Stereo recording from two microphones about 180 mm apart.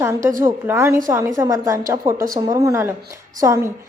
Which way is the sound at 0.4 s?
15° right (ahead or behind).